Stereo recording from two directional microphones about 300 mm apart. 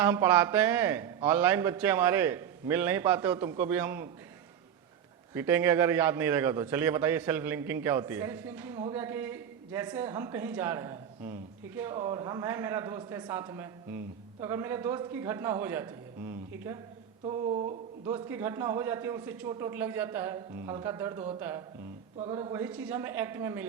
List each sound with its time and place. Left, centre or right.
0.0 s a man's voice: centre
5.3 s a man's voice: centre
17.2 s a sound: centre
18.1 s a man's voice: centre